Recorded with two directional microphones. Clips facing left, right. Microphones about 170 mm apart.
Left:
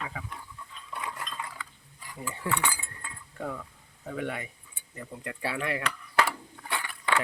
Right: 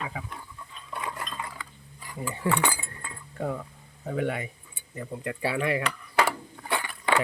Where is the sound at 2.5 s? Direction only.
40° right (ahead or behind).